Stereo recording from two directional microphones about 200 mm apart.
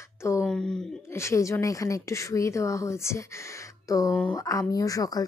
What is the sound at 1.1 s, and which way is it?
A woman's voice, 15° left (ahead or behind).